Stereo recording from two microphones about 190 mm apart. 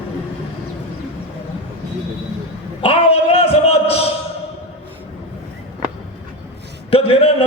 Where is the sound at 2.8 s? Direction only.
30° left (ahead or behind).